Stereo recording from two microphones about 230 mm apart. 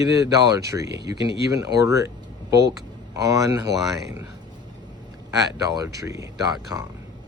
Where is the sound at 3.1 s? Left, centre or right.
Centre.